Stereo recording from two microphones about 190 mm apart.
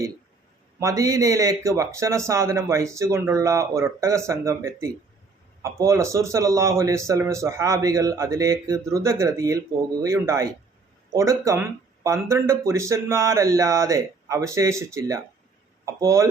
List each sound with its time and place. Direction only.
0.8 s speech: 15° right (ahead or behind)